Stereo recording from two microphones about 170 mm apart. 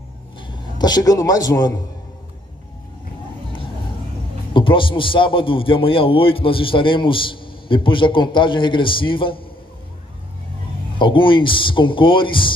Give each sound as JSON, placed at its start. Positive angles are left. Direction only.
{"t": 0.4, "sound": "a man's voice", "side_deg": 25}
{"t": 4.6, "sound": "a man's voice", "side_deg": 30}
{"t": 11.0, "sound": "speech", "side_deg": 30}